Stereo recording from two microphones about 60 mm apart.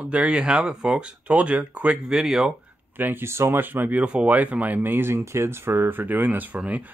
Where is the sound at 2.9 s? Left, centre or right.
Right.